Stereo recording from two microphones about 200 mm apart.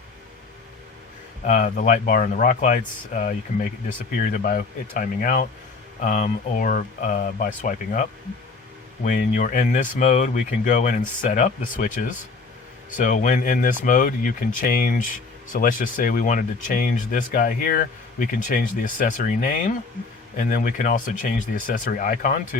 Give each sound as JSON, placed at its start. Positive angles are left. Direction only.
{"t": 1.5, "sound": "speech", "side_deg": 40}
{"t": 9.0, "sound": "speech", "side_deg": 40}